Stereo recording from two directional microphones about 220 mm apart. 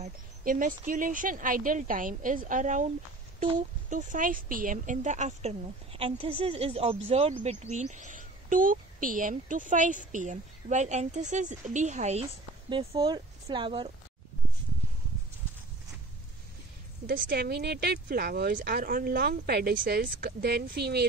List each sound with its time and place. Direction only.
0.0 s speech: 40° right (ahead or behind)
3.9 s speech: 35° right (ahead or behind); by 13.8 s 20° right (ahead or behind)
17.0 s speech: 40° right (ahead or behind)